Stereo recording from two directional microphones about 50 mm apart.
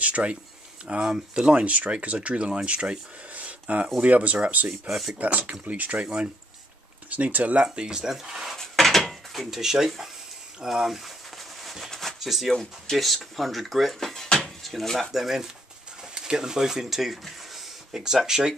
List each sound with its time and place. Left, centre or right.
0.0 s a sound: right
0.8 s speech: right
4.8 s speech: centre
5.2 s speech: right
7.1 s speech: right
7.6 s speech: centre
8.5 s dishes: centre
10.6 s speech: centre
11.6 s a sound: centre
11.9 s a sound: centre
12.2 s speech: centre